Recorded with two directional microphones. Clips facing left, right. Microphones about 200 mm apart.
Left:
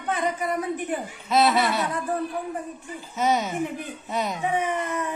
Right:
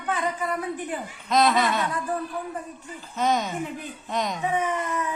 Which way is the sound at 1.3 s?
5° left (ahead or behind).